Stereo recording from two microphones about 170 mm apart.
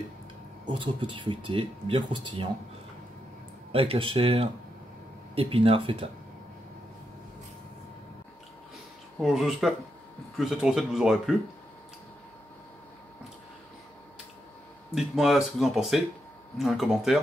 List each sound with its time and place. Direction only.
0.7 s speech: 30° right (ahead or behind)
3.7 s speech: 35° right (ahead or behind)
9.2 s speech: centre (ahead or behind)
15.0 s speech: centre (ahead or behind)